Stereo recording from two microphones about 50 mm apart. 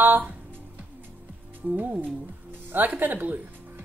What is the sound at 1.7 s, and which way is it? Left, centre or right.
Speech, right.